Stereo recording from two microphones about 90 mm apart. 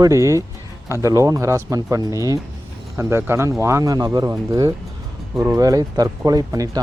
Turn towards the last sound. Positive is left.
turn(degrees=-40)  # may be behind; listen again after turning